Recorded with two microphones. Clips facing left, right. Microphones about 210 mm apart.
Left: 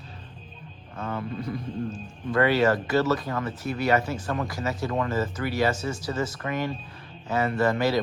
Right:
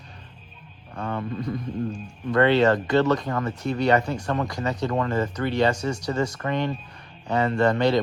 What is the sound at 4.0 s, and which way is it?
Speech, 5° left (ahead or behind).